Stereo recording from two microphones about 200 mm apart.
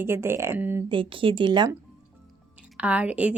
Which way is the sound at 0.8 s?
25° right (ahead or behind).